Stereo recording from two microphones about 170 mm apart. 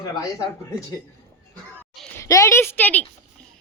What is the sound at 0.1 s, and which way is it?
Speech, 20° left (ahead or behind).